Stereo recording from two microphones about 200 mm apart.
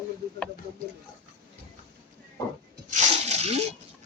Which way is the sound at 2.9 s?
35° right (ahead or behind).